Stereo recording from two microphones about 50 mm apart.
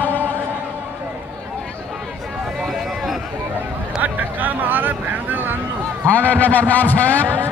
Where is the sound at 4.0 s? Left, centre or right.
Right.